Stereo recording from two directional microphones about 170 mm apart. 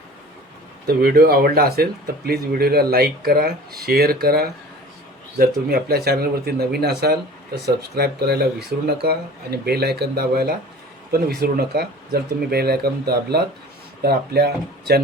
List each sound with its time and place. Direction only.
0.9 s speech: 65° right (ahead or behind)